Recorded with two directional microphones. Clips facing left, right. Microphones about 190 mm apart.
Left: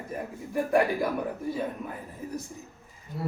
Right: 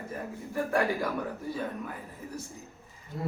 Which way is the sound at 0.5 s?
15° left (ahead or behind).